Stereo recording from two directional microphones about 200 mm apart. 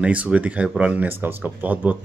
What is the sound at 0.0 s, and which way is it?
Speech, 5° right (ahead or behind).